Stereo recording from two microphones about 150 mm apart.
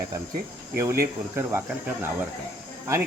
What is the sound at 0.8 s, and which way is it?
Speech, 20° right (ahead or behind).